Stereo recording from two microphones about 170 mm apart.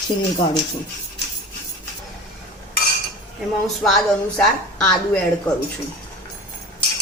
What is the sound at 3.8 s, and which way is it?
A woman's voice, centre (ahead or behind).